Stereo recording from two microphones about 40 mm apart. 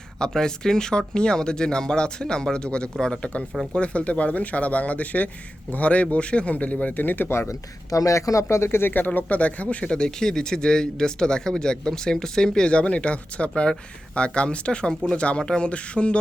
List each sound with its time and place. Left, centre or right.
0.2 s speech: centre
3.8 s speech: left
8.6 s speech: left
8.9 s speech: left
9.8 s speech: left